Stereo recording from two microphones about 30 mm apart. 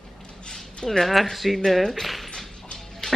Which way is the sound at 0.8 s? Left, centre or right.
Centre.